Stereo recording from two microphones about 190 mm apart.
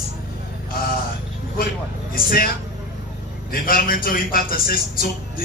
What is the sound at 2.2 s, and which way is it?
Speech, 50° left (ahead or behind).